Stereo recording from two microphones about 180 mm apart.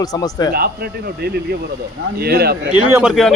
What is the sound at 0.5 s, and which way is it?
Speech, 60° right (ahead or behind).